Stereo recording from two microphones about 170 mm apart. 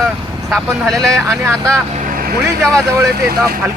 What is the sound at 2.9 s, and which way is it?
Speech, 15° right (ahead or behind).